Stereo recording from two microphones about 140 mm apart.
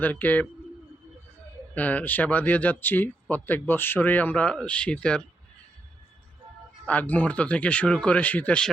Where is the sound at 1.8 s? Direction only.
10° left (ahead or behind).